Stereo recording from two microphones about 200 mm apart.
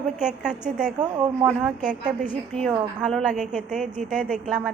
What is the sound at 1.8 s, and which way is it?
A woman's voice, 5° right (ahead or behind).